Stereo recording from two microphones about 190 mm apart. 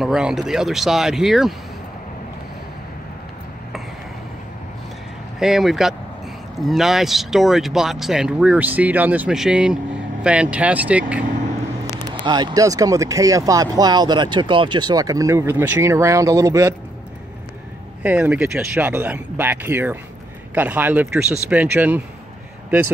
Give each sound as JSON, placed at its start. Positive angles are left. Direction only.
{"t": 0.0, "sound": "speech", "side_deg": 0}
{"t": 5.4, "sound": "speech", "side_deg": 0}
{"t": 12.1, "sound": "speech", "side_deg": -20}
{"t": 18.0, "sound": "speech", "side_deg": -5}